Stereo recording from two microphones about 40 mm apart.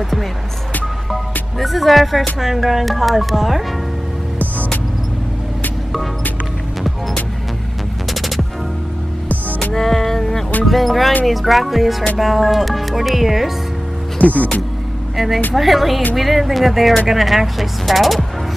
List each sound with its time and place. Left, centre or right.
1.6 s speech: centre
8.1 s music: centre
9.3 s music: left
9.8 s music: centre
10.6 s speech: centre
14.1 s speech: left
15.1 s speech: centre